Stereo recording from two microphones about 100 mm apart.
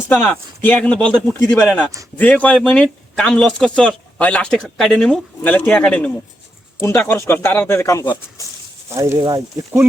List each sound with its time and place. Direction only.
0.2 s speech: 15° left (ahead or behind)
7.0 s speech: 20° left (ahead or behind)
9.1 s speech: 40° right (ahead or behind)